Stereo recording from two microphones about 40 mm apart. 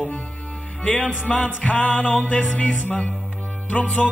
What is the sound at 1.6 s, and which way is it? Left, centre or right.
Music, left.